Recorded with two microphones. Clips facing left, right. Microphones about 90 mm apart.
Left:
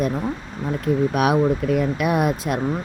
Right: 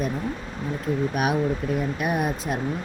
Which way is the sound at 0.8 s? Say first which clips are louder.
Left 5 dB; 85° left.